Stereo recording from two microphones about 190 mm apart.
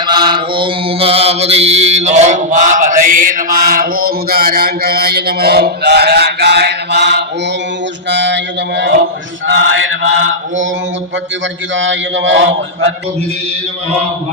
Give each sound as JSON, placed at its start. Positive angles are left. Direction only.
{"t": 0.0, "sound": "mantra", "side_deg": -25}
{"t": 8.1, "sound": "a man's voice", "side_deg": -70}
{"t": 9.5, "sound": "mantra", "side_deg": -80}
{"t": 11.7, "sound": "a man's voice", "side_deg": -75}